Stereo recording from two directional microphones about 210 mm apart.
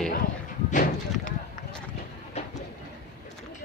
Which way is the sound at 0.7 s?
35° left (ahead or behind).